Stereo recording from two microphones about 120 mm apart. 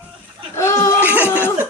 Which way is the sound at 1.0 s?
15° right (ahead or behind).